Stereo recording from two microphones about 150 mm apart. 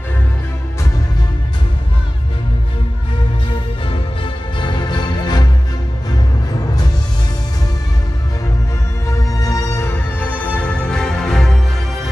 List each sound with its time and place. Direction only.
3.9 s music: 35° left (ahead or behind)
9.0 s music: 20° left (ahead or behind); by 12.1 s 5° left (ahead or behind)